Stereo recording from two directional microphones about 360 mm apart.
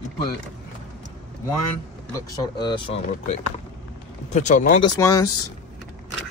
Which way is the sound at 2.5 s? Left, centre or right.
Centre.